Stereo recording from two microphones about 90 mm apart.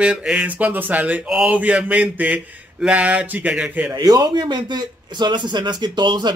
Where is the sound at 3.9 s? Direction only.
45° right (ahead or behind).